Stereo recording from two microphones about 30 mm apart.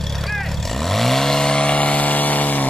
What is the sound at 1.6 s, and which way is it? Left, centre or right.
Vehicle, left.